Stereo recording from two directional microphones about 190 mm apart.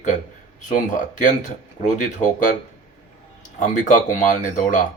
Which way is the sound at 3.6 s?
40° left (ahead or behind).